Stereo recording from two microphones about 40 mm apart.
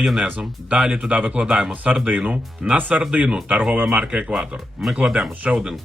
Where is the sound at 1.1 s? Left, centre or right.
Right.